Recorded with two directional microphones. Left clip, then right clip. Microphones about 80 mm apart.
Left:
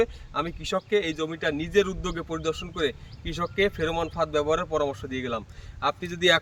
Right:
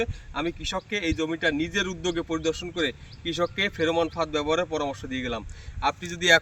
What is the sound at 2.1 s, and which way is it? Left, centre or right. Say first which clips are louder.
Speech: right 1 dB; left.